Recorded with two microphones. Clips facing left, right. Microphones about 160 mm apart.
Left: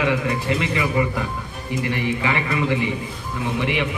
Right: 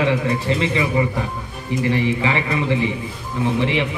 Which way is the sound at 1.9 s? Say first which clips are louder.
Right 4 dB; 30° right (ahead or behind).